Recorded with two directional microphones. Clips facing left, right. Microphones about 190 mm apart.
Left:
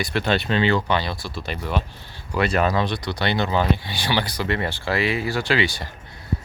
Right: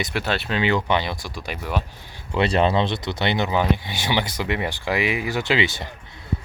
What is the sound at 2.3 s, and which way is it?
Speech, 25° right (ahead or behind).